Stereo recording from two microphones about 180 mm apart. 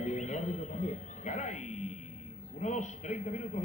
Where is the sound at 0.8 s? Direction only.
40° left (ahead or behind).